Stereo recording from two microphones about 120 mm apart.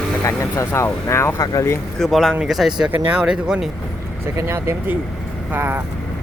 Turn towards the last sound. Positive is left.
turn(degrees=-15)  # may be behind; listen again after turning